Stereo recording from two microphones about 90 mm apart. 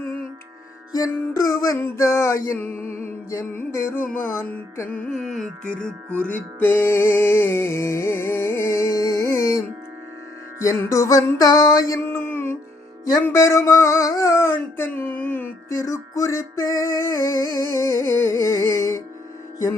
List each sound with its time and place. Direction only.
0.9 s music: 40° left (ahead or behind)
4.9 s music: 10° left (ahead or behind)
5.2 s carnatic music: 5° left (ahead or behind)
6.1 s music: 25° right (ahead or behind)
6.3 s music: 25° left (ahead or behind)
10.6 s music: 35° left (ahead or behind)
12.0 s a sound: 20° left (ahead or behind)
13.3 s music: 35° left (ahead or behind)
14.1 s dog: 35° left (ahead or behind); by 15.4 s 20° left (ahead or behind)
15.7 s music: 35° left (ahead or behind)